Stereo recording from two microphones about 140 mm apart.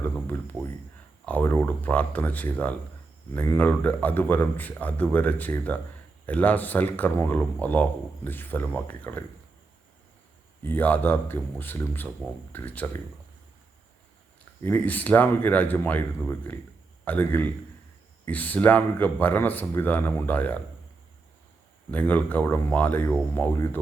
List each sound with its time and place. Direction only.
0.3 s a sound: 15° left (ahead or behind)
1.2 s speech: 10° left (ahead or behind)
10.6 s speech: 15° left (ahead or behind)
14.6 s speech: 15° left (ahead or behind)
21.8 s speech: 10° left (ahead or behind)